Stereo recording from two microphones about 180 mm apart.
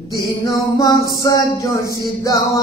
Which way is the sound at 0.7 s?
20° left (ahead or behind).